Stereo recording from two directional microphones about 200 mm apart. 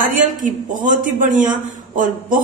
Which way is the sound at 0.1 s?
40° right (ahead or behind).